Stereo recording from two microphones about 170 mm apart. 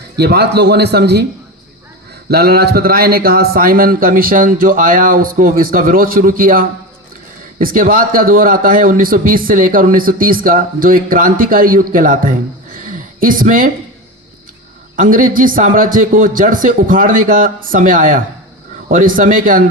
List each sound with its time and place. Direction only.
0.2 s a man's voice: 75° right (ahead or behind)
2.3 s a man's voice: 65° right (ahead or behind)
12.9 s a sound: 55° right (ahead or behind)
14.9 s a man's voice: 55° right (ahead or behind)